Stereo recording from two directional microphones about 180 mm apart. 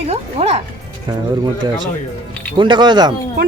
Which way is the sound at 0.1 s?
35° right (ahead or behind).